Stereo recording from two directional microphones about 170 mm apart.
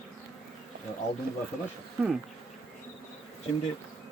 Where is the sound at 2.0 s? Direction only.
5° right (ahead or behind).